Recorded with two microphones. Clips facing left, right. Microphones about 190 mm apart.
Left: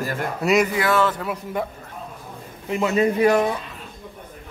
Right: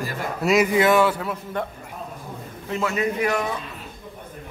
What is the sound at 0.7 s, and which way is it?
Speech, 15° right (ahead or behind).